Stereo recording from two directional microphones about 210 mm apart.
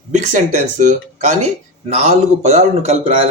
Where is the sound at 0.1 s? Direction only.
35° right (ahead or behind).